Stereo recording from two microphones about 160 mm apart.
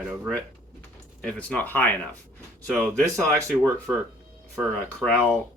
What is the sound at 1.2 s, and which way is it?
Speech, 10° left (ahead or behind).